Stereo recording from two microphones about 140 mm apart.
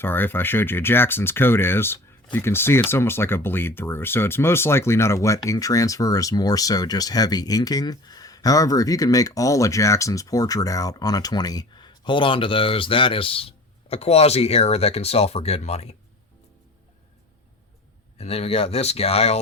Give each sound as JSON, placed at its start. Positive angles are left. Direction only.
{"t": 0.0, "sound": "speech", "side_deg": 15}
{"t": 18.2, "sound": "speech", "side_deg": 45}